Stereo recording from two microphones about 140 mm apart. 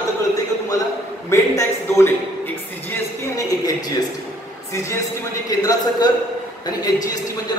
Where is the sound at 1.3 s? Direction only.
20° left (ahead or behind).